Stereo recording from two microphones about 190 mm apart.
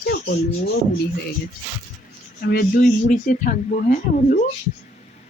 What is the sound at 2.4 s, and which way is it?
Speech, 55° left (ahead or behind).